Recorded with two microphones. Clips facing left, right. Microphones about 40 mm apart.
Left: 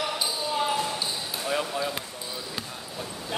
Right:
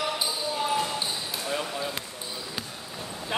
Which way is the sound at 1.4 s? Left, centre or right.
Centre.